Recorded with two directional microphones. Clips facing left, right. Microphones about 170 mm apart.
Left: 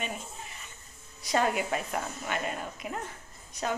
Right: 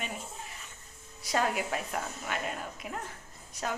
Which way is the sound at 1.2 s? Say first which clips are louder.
Left 2 dB; centre (ahead or behind).